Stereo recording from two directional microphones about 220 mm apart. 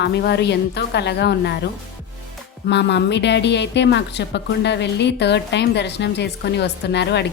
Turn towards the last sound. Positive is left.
turn(degrees=50)  # may be behind; listen again after turning